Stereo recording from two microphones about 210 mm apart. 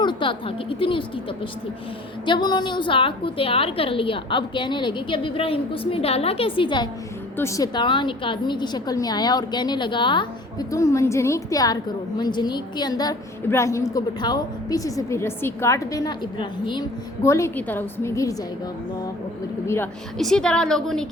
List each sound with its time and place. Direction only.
0.0 s a woman's voice: 25° left (ahead or behind)
2.2 s a woman's voice: 20° left (ahead or behind)
19.6 s a woman's voice: 10° left (ahead or behind)